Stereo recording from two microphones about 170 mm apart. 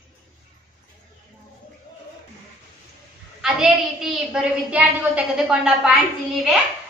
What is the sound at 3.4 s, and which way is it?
A woman's voice, centre (ahead or behind).